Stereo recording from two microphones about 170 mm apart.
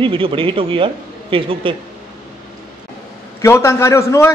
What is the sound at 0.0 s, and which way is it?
Speech, 30° right (ahead or behind).